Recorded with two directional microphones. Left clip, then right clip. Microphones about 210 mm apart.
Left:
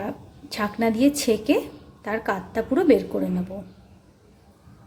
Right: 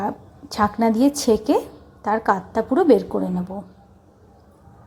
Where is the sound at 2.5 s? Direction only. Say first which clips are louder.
Right 1 dB; 15° right (ahead or behind).